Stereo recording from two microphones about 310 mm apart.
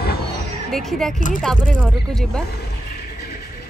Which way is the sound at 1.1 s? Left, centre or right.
Left.